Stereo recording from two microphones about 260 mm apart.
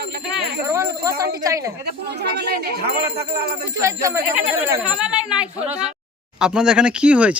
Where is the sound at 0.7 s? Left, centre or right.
Centre.